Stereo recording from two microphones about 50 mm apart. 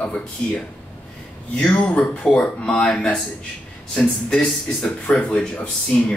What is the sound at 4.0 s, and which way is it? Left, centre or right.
Speech, centre.